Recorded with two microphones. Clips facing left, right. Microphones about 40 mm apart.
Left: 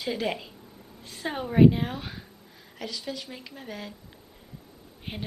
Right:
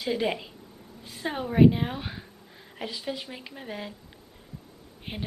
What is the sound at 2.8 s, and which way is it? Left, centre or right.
A woman's voice, right.